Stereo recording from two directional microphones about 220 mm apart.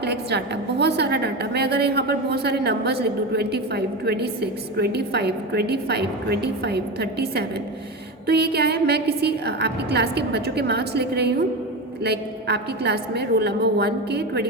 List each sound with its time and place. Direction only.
0.0 s a woman's voice: 50° right (ahead or behind)